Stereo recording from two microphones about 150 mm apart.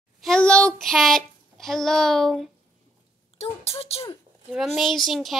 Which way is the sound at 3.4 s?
40° left (ahead or behind).